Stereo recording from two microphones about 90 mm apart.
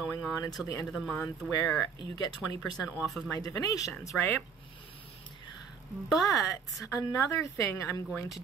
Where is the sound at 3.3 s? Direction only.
45° left (ahead or behind).